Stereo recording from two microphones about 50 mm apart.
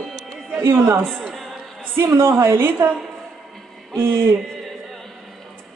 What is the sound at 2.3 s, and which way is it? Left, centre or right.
Speech, right.